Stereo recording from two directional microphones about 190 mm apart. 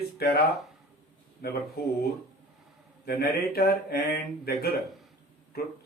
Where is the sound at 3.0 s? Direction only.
55° left (ahead or behind).